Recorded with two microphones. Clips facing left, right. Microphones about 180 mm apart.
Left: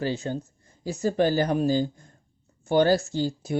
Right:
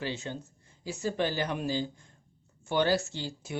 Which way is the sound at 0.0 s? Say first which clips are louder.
Left 7 dB; 40° left (ahead or behind).